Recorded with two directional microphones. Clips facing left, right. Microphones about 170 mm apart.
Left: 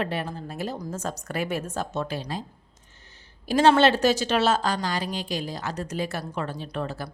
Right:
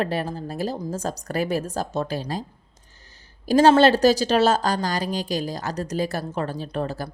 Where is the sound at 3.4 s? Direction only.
40° right (ahead or behind).